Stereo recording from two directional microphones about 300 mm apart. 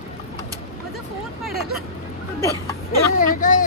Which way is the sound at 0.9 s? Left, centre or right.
Centre.